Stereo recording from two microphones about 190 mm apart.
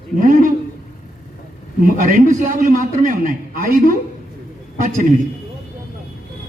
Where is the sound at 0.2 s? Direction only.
45° right (ahead or behind).